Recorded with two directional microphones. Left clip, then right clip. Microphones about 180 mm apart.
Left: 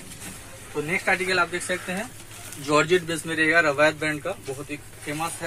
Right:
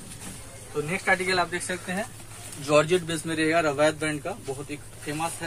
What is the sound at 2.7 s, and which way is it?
Speech, 20° left (ahead or behind).